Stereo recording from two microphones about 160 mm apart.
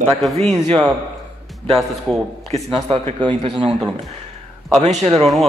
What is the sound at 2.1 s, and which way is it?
Speech, centre (ahead or behind).